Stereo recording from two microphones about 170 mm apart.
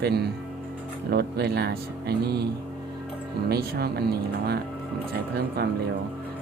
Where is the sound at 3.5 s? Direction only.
70° right (ahead or behind).